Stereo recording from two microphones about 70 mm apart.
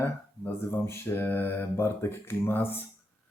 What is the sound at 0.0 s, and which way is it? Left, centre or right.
Speech, left.